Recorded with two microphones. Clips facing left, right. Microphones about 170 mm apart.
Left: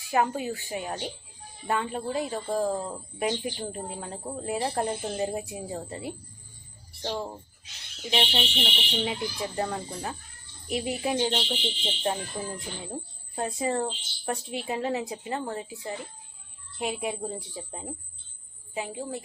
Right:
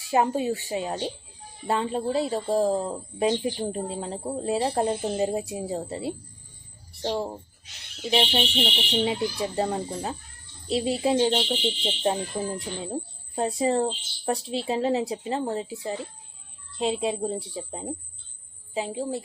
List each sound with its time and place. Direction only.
0.0 s a woman's voice: 25° right (ahead or behind)